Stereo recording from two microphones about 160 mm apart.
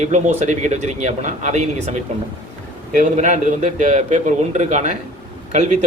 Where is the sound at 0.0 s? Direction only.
45° right (ahead or behind).